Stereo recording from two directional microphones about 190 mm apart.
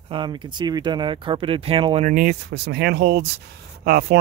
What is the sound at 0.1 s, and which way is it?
Speech, 25° right (ahead or behind).